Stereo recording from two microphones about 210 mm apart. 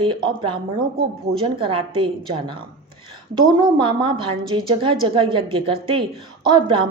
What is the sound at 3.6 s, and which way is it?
A woman's voice, 20° right (ahead or behind).